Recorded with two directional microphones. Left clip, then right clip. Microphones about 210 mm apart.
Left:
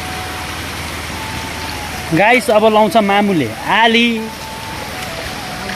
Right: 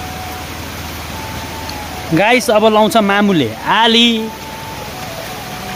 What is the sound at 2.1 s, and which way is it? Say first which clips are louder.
Speech: even; 10° right (ahead or behind).